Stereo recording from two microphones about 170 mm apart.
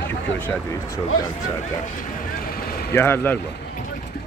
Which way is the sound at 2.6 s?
65° left (ahead or behind).